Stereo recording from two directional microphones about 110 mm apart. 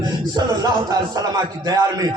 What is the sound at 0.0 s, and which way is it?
A man's voice, 40° right (ahead or behind).